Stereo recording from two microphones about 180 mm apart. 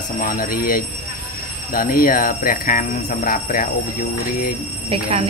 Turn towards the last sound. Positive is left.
turn(degrees=-35)  # may be behind; listen again after turning